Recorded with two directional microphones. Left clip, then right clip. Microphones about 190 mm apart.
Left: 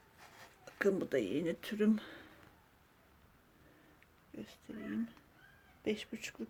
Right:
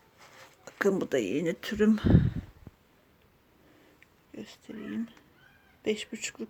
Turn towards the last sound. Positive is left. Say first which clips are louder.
# right 7 dB
turn(degrees=-15)  # may be behind; listen again after turning